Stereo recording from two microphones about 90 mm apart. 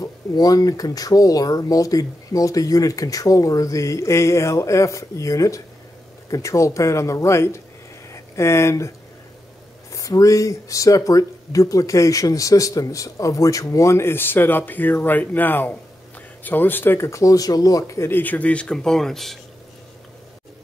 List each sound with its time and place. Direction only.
0.0 s speech: 45° left (ahead or behind)
9.9 s speech: 40° left (ahead or behind)
18.0 s speech: 20° left (ahead or behind); by 19.3 s 5° left (ahead or behind)